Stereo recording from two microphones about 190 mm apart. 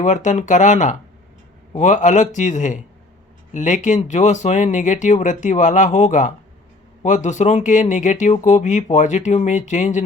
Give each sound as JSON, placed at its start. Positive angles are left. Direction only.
{"t": 0.0, "sound": "speech", "side_deg": 40}